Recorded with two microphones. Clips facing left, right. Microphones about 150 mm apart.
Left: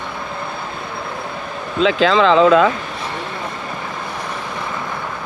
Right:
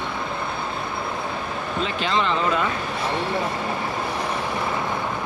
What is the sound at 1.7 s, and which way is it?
Speech, 90° left.